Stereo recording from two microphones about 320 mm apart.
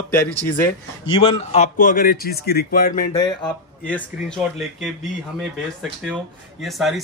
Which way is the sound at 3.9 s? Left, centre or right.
Centre.